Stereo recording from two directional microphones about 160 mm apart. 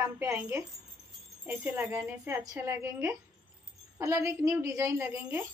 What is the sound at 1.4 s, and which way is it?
A woman's voice, 10° right (ahead or behind).